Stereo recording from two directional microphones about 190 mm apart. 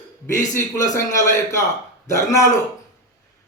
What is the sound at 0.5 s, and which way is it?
A man's voice, 15° left (ahead or behind).